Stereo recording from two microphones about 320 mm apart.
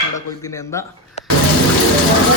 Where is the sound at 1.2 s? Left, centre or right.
Left.